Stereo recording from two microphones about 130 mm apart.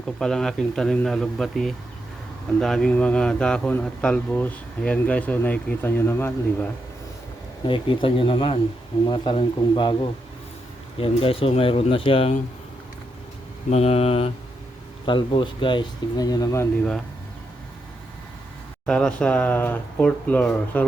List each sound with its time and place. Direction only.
0.2 s a man's voice: 5° left (ahead or behind)
7.7 s speech: 40° left (ahead or behind)
11.0 s speech: 45° left (ahead or behind)
13.7 s speech: 55° left (ahead or behind)
15.0 s speech: 40° left (ahead or behind)
18.9 s a man's voice: 5° left (ahead or behind)